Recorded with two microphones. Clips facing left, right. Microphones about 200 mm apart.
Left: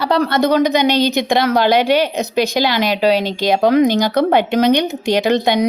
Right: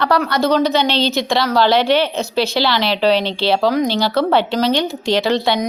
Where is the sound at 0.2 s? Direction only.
25° left (ahead or behind).